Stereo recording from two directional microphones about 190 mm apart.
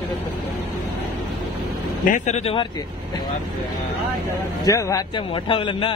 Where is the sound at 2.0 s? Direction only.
40° left (ahead or behind).